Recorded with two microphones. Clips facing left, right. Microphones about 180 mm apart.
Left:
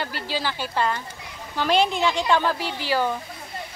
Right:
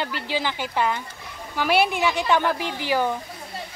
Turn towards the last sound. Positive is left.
turn(degrees=-15)  # may be behind; listen again after turning